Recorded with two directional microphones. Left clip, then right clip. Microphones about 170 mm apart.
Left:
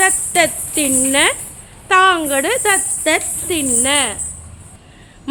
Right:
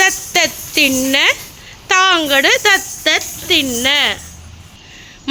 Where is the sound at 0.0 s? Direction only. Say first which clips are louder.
Right 1 dB; 10° right (ahead or behind).